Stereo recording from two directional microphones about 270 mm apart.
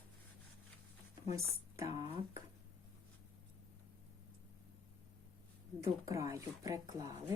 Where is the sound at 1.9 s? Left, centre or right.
Centre.